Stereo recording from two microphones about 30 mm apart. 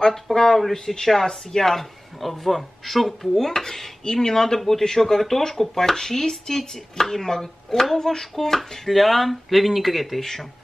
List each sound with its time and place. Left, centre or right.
0.0 s speech: centre
4.0 s speech: left
8.8 s speech: centre